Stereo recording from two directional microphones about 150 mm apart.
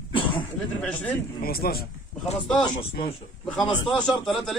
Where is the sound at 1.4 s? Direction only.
90° left.